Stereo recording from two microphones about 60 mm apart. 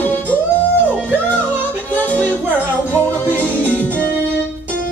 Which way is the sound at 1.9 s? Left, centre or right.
Left.